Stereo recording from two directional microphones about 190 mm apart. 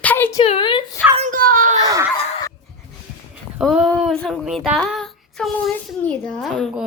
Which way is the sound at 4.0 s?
Centre (ahead or behind).